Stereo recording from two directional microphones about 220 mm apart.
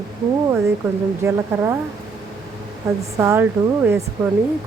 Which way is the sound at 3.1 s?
10° right (ahead or behind).